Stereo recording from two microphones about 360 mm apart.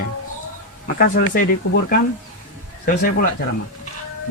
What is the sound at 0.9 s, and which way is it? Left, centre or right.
Speech, left.